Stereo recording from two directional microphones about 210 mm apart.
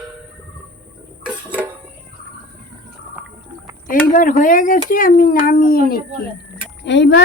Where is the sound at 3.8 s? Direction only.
40° left (ahead or behind).